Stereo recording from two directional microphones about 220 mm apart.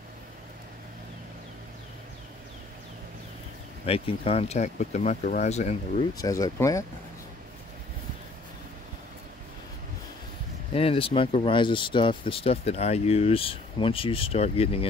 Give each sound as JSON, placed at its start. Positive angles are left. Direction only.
{"t": 3.8, "sound": "speech", "side_deg": 25}
{"t": 6.1, "sound": "speech", "side_deg": 15}
{"t": 10.7, "sound": "speech", "side_deg": 25}